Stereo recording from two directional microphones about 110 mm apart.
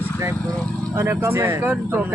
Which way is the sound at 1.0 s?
25° right (ahead or behind).